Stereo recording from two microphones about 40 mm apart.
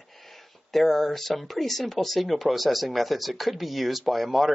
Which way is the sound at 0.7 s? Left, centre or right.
Centre.